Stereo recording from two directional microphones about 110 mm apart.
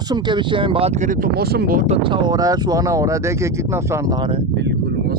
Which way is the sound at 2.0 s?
45° right (ahead or behind).